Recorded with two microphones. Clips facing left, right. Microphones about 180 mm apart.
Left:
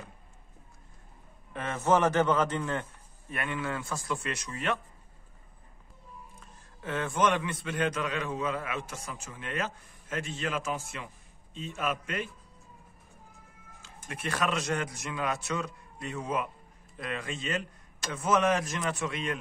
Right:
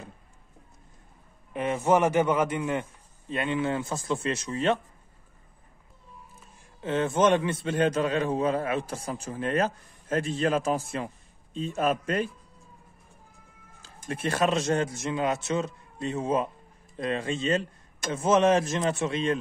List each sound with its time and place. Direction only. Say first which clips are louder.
1.5 s a man's voice: right 3 dB; 15° right (ahead or behind)
6.8 s a man's voice: right 5 dB; 25° right (ahead or behind)
14.0 s a man's voice: right 6 dB; 30° right (ahead or behind)